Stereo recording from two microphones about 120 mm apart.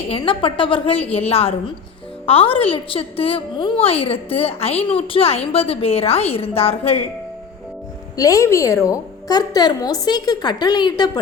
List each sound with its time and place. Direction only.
0.1 s a woman's voice: 45° left (ahead or behind)
8.1 s a woman's voice: 30° left (ahead or behind)